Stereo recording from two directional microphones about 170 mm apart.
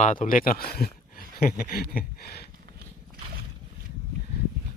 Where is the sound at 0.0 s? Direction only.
50° left (ahead or behind).